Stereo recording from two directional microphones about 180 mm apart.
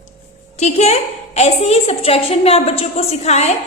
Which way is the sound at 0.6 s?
40° left (ahead or behind).